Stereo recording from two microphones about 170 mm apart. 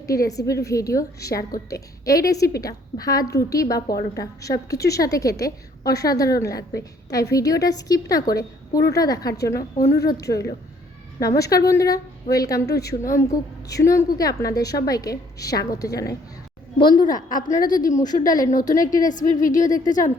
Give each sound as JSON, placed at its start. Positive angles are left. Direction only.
{"t": 0.1, "sound": "a woman's voice", "side_deg": 20}
{"t": 9.6, "sound": "a woman's voice", "side_deg": 50}
{"t": 10.1, "sound": "a woman's voice", "side_deg": 20}
{"t": 17.2, "sound": "a woman's voice", "side_deg": 50}
{"t": 17.9, "sound": "a woman's voice", "side_deg": 25}
{"t": 19.0, "sound": "a woman's voice", "side_deg": 50}